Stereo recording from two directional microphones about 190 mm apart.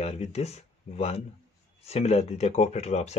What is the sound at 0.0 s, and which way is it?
Speech, 35° left (ahead or behind).